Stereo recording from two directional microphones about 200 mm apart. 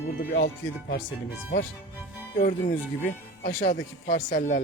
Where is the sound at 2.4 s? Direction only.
45° left (ahead or behind).